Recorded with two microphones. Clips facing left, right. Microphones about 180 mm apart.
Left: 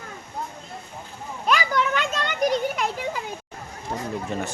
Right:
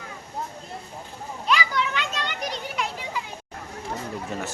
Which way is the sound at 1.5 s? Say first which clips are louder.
Left 3 dB; 45° left (ahead or behind).